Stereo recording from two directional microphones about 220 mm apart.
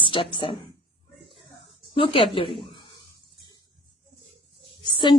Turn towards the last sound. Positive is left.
turn(degrees=20)  # may be behind; listen again after turning